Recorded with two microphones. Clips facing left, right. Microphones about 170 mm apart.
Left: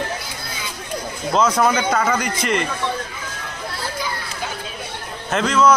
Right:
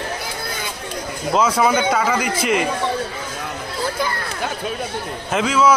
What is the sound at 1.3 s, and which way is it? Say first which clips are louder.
A man's voice: even; 5° right (ahead or behind).